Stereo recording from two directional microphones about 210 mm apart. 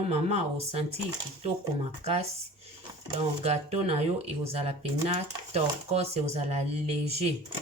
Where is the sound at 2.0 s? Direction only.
30° right (ahead or behind).